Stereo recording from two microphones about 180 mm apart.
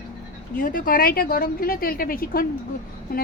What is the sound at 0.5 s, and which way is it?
A woman's voice, 50° left (ahead or behind).